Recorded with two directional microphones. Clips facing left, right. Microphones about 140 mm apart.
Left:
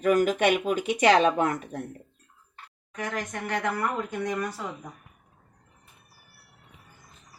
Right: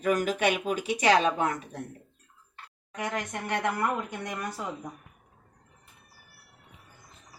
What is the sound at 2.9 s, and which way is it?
Speech, 20° right (ahead or behind).